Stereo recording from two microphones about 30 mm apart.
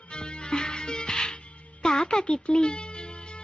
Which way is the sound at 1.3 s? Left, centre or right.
Left.